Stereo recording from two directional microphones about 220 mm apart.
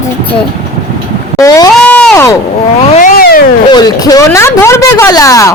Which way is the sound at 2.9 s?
40° left (ahead or behind).